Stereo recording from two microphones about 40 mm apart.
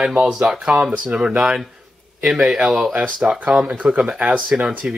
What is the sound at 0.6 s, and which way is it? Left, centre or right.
Speech, right.